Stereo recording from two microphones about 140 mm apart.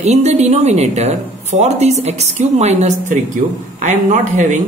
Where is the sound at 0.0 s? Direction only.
50° right (ahead or behind).